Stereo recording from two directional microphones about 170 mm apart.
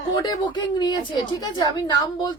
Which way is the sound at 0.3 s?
25° left (ahead or behind).